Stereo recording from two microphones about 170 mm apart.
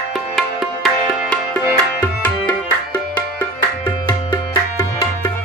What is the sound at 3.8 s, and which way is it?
Music, 25° left (ahead or behind).